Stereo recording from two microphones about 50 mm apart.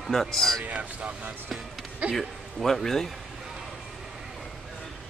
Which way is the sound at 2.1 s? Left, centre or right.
Centre.